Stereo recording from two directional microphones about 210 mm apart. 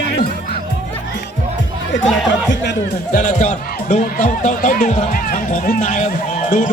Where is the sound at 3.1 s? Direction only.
35° left (ahead or behind).